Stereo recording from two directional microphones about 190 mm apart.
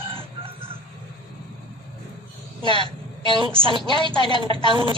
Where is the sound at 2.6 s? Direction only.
25° right (ahead or behind).